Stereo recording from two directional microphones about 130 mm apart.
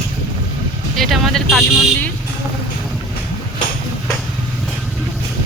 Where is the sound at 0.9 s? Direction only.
Centre (ahead or behind).